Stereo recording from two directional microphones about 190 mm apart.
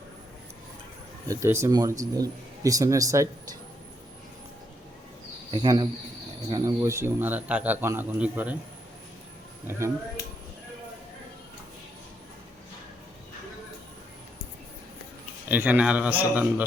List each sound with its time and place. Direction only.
1.3 s speech: 15° right (ahead or behind)
5.5 s speech: 20° right (ahead or behind)
9.6 s speech: 15° right (ahead or behind)
15.4 s speech: 10° right (ahead or behind)